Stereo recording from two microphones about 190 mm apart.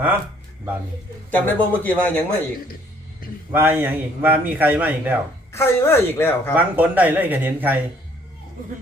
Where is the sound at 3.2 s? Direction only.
50° left (ahead or behind).